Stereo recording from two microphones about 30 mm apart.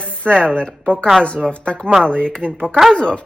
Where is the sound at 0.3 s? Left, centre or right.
Left.